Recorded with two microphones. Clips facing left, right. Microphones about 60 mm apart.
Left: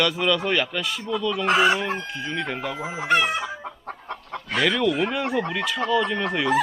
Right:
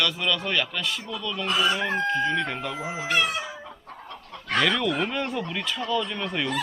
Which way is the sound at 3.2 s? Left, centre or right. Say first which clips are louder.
Left 4 dB; left.